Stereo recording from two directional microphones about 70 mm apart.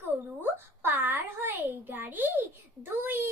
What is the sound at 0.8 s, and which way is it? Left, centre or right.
A child's voice, right.